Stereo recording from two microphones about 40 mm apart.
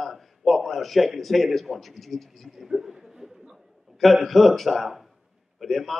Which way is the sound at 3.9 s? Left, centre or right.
Centre.